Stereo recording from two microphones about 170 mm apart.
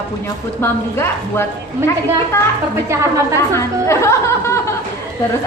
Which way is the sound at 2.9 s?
15° right (ahead or behind).